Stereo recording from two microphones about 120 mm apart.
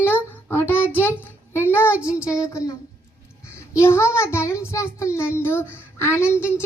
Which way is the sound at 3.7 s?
20° left (ahead or behind).